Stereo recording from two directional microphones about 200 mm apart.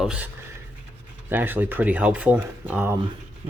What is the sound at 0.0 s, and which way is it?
Speech, 5° right (ahead or behind).